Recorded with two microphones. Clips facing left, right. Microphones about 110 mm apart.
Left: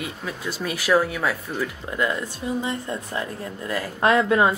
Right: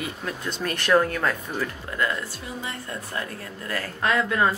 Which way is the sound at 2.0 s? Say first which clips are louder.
Left 2 dB; 20° left (ahead or behind).